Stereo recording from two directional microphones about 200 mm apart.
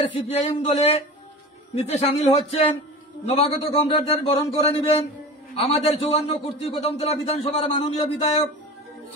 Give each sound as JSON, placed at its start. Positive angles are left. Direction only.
{"t": 0.1, "sound": "a man's voice", "side_deg": 30}